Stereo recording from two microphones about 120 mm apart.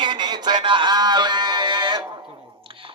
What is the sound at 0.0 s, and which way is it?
Music, 40° right (ahead or behind).